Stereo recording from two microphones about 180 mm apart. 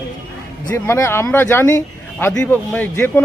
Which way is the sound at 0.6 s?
15° left (ahead or behind).